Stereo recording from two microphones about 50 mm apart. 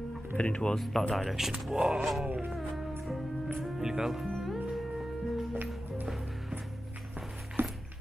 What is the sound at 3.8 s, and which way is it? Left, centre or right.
Speech, centre.